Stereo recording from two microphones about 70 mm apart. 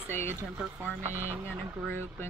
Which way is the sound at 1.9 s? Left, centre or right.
Left.